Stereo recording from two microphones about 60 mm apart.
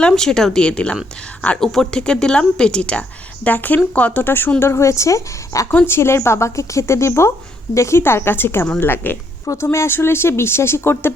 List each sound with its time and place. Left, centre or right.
0.0 s speech: centre
3.4 s speech: left
4.2 s speech: left
4.6 s a woman's voice: left
5.9 s a woman's voice: left